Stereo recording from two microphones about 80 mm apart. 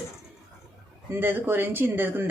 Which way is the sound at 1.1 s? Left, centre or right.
Right.